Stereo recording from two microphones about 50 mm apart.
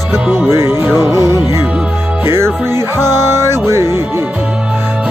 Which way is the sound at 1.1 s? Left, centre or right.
Right.